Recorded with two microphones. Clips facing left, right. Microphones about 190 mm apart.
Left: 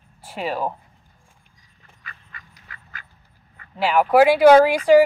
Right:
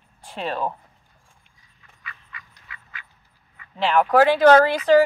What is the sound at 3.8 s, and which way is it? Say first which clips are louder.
Speech: left 2 dB; 10° left (ahead or behind).